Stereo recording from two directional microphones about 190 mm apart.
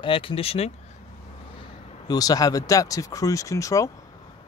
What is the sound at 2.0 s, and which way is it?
Speech, 20° left (ahead or behind).